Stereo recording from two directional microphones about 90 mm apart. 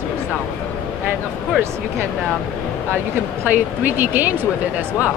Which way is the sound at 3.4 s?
20° right (ahead or behind).